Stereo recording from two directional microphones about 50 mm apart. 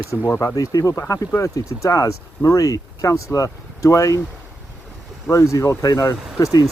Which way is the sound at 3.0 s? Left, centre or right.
Left.